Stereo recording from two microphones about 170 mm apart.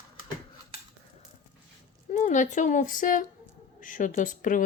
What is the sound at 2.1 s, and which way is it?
Speech, 45° left (ahead or behind).